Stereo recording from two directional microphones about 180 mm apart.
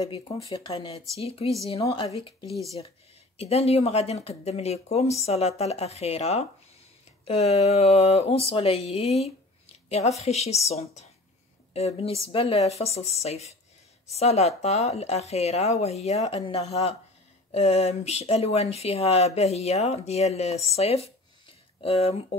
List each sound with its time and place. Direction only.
0.5 s speech: 30° left (ahead or behind)
3.3 s speech: 35° left (ahead or behind)